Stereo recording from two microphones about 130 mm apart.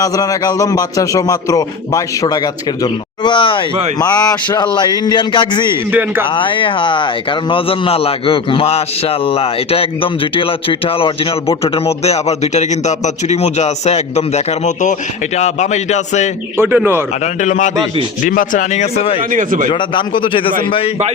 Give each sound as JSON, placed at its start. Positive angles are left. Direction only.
{"t": 0.0, "sound": "a man's voice", "side_deg": 25}
{"t": 5.9, "sound": "speech", "side_deg": -15}
{"t": 6.2, "sound": "a man's voice", "side_deg": 40}
{"t": 16.6, "sound": "speech", "side_deg": -15}
{"t": 17.4, "sound": "speech", "side_deg": 70}
{"t": 18.2, "sound": "speech", "side_deg": 90}
{"t": 19.3, "sound": "a man's voice", "side_deg": -90}
{"t": 19.7, "sound": "a man's voice", "side_deg": 40}